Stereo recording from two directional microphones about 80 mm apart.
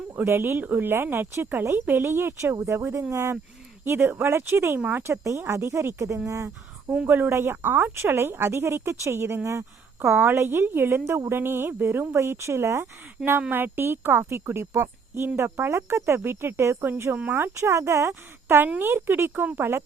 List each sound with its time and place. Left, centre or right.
0.2 s a woman's voice: right
6.9 s a woman's voice: right